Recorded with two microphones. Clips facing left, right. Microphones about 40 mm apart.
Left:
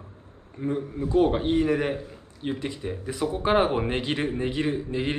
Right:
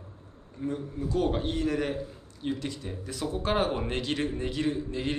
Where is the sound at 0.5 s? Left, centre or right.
Left.